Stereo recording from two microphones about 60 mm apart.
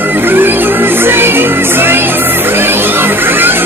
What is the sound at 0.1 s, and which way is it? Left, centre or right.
Music, right.